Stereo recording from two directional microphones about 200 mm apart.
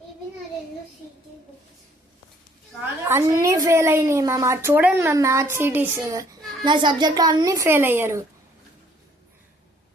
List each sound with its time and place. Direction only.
3.1 s a child's voice: 15° right (ahead or behind)